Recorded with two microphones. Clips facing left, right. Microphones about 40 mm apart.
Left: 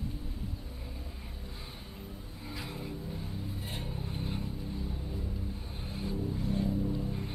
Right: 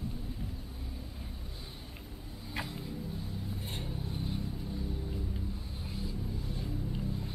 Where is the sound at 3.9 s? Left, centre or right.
Centre.